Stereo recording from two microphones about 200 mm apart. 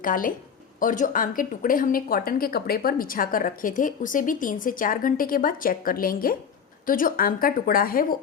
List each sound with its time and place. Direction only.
0.0 s speech: 45° left (ahead or behind)